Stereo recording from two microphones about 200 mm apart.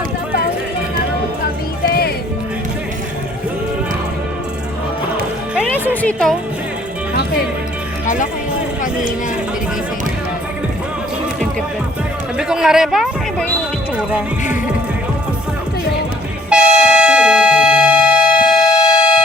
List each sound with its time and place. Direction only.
1.9 s music: 50° left (ahead or behind)
5.5 s music: 5° left (ahead or behind)
8.0 s music: 40° left (ahead or behind)
12.4 s a sound: 5° right (ahead or behind)
16.5 s train: 5° right (ahead or behind)